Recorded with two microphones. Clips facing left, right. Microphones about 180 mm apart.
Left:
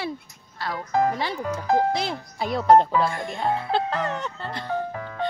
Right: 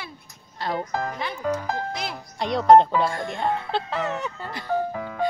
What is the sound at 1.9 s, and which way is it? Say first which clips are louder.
Speech: left 5 dB; 30° left (ahead or behind).